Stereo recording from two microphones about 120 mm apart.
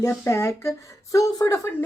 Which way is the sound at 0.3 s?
25° left (ahead or behind).